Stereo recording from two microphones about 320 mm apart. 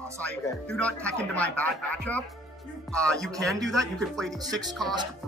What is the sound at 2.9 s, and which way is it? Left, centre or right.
Speech, centre.